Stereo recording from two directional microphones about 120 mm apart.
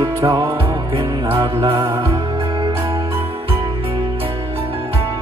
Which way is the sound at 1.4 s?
45° right (ahead or behind).